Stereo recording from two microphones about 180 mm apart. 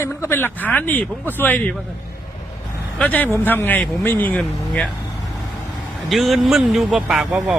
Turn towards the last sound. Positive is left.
turn(degrees=-5)  # may be behind; listen again after turning